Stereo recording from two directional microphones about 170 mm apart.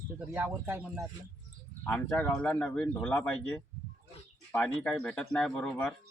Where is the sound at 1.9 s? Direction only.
10° left (ahead or behind).